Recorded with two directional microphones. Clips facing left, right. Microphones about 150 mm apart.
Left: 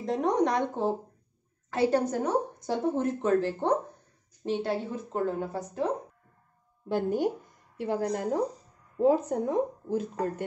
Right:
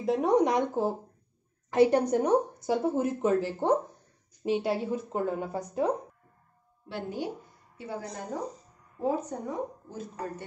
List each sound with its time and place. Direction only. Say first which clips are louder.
0.0 s speech: right 2 dB; 10° right (ahead or behind)
6.9 s speech: left 7 dB; 45° left (ahead or behind)
7.8 s speech: left 8 dB; 90° left